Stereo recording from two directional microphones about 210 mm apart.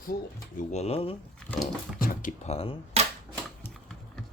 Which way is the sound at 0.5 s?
30° left (ahead or behind).